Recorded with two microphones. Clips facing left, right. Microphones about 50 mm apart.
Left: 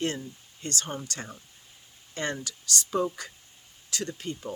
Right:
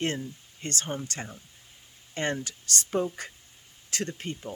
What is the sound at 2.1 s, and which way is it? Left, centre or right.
Speech, right.